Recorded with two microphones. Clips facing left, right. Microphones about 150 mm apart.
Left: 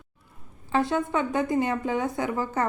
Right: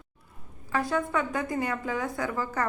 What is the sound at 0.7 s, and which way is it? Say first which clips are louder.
A woman's voice: left 3 dB; 25° left (ahead or behind).